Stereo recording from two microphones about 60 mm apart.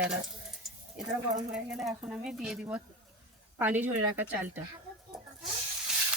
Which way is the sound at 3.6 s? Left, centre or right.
Right.